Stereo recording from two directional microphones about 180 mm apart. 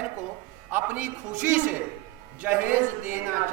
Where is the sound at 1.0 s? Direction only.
45° right (ahead or behind).